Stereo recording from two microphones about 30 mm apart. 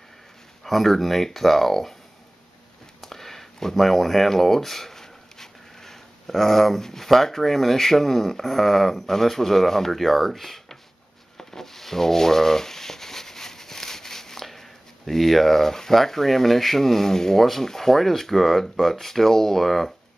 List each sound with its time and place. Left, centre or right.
0.7 s speech: centre
3.0 s a sound: centre
6.8 s speech: centre
11.3 s rub: centre
17.5 s speech: centre